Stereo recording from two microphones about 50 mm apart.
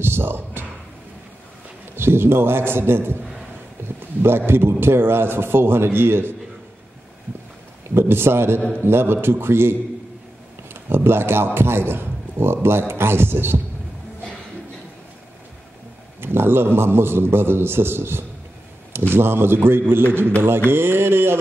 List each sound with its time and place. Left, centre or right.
0.0 s a sound: right
2.0 s a man's voice: right
7.9 s a man's voice: right
16.2 s a man's voice: right